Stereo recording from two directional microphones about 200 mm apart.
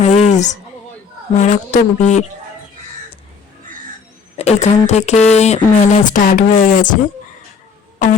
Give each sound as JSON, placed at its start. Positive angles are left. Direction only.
{"t": 0.0, "sound": "a sound", "side_deg": 35}
{"t": 1.4, "sound": "speech", "side_deg": 35}
{"t": 4.4, "sound": "speech", "side_deg": 35}